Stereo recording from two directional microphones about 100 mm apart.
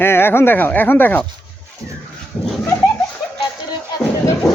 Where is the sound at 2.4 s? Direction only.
15° left (ahead or behind).